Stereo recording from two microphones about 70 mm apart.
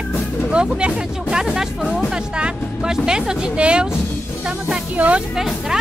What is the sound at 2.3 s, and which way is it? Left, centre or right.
Speech, centre.